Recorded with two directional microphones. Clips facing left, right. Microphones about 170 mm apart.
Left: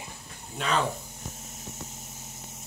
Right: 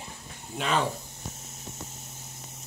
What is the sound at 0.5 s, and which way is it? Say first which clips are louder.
Speech: right 1 dB; 5° right (ahead or behind).